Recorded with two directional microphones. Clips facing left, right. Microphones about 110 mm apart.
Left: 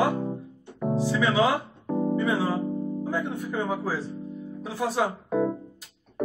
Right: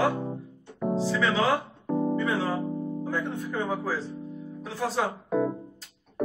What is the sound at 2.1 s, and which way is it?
A man's voice, 15° left (ahead or behind).